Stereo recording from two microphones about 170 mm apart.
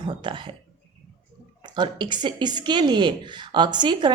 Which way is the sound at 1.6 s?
25° right (ahead or behind).